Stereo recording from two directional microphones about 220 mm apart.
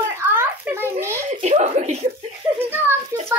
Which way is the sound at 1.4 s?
30° right (ahead or behind).